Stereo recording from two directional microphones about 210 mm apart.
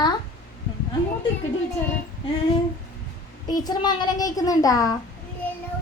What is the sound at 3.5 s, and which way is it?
Speech, 20° left (ahead or behind).